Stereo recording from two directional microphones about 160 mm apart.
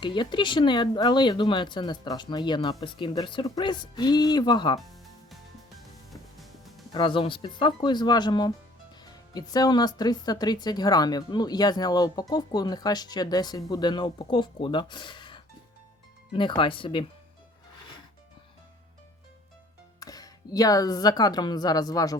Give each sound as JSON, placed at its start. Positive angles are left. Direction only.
{"t": 0.0, "sound": "speech", "side_deg": 30}
{"t": 6.1, "sound": "music", "side_deg": 0}
{"t": 6.9, "sound": "speech", "side_deg": 30}
{"t": 20.0, "sound": "speech", "side_deg": 25}